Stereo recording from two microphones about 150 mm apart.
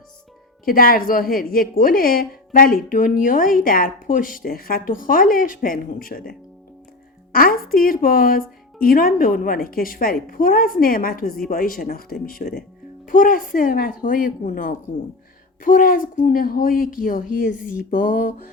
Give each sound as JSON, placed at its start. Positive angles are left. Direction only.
{"t": 0.6, "sound": "a woman's voice", "side_deg": 75}
{"t": 7.3, "sound": "a woman's voice", "side_deg": 70}
{"t": 11.8, "sound": "a woman's voice", "side_deg": 80}